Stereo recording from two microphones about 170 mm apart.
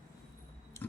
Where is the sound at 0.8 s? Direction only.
15° left (ahead or behind).